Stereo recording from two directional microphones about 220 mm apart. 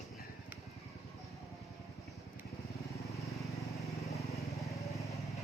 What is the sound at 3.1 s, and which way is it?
Vehicle, centre (ahead or behind).